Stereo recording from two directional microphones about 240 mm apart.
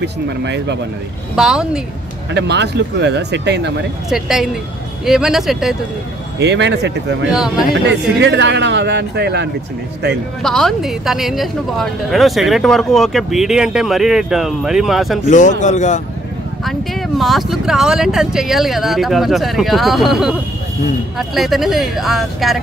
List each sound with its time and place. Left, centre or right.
0.0 s speech: right
1.3 s speech: centre
2.3 s speech: right
4.1 s speech: centre
6.4 s speech: right
7.2 s speech: centre
8.2 s speech: right
10.4 s speech: centre
15.2 s a man's voice: left
17.2 s speech: centre